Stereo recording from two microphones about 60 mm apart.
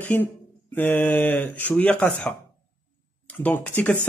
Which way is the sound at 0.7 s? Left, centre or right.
Left.